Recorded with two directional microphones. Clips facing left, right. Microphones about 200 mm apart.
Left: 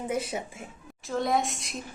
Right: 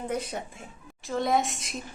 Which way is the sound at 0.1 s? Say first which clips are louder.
Left 1 dB; 5° left (ahead or behind).